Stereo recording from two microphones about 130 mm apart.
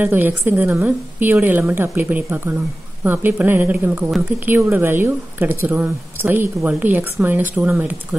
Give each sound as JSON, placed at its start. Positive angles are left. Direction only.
{"t": 0.0, "sound": "a woman's voice", "side_deg": -15}